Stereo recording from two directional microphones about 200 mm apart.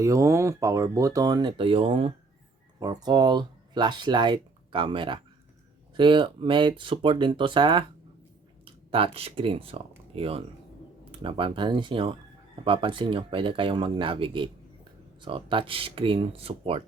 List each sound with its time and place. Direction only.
0.0 s speech: 15° right (ahead or behind)